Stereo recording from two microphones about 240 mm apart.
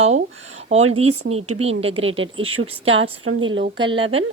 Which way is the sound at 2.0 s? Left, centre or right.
Right.